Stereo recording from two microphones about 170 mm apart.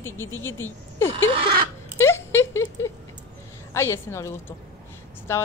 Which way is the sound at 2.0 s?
15° left (ahead or behind).